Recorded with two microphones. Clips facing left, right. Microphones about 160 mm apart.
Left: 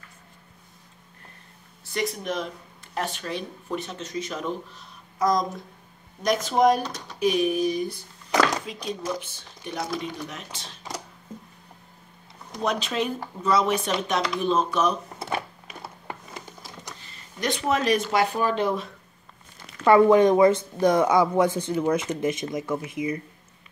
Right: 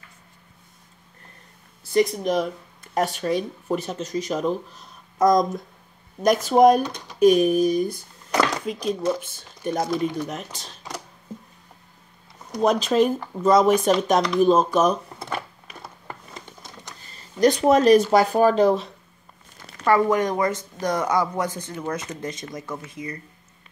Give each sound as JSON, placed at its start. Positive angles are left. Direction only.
{"t": 1.9, "sound": "speech", "side_deg": -35}
{"t": 12.5, "sound": "speech", "side_deg": -40}
{"t": 17.0, "sound": "speech", "side_deg": -40}
{"t": 19.9, "sound": "speech", "side_deg": 25}